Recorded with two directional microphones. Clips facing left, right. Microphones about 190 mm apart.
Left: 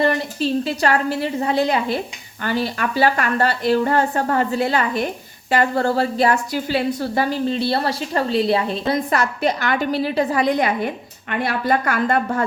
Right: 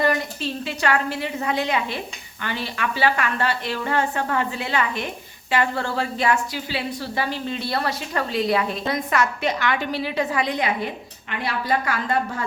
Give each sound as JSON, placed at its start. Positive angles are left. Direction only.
{"t": 0.0, "sound": "a woman's voice", "side_deg": 35}